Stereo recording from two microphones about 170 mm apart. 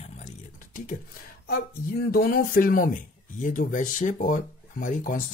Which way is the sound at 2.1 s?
60° left (ahead or behind).